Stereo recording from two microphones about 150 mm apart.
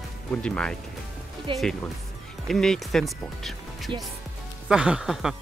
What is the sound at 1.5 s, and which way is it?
Speech, 35° right (ahead or behind).